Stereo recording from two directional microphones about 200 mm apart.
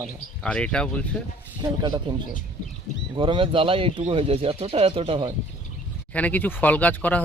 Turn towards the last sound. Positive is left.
turn(degrees=10)  # may be behind; listen again after turning